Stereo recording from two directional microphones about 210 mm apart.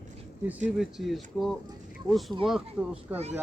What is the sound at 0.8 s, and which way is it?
Speech, centre (ahead or behind).